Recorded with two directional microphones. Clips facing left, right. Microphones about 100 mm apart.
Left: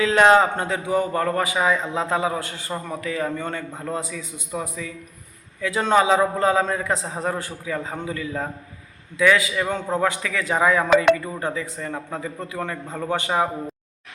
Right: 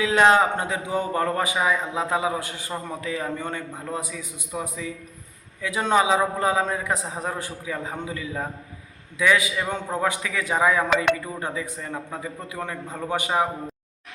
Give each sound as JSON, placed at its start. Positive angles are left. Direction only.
{"t": 0.0, "sound": "a man's voice", "side_deg": -10}